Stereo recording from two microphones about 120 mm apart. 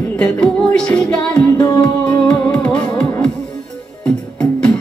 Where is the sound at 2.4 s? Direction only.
10° left (ahead or behind).